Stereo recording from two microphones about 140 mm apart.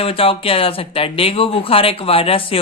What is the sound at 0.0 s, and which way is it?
Speech, 40° left (ahead or behind).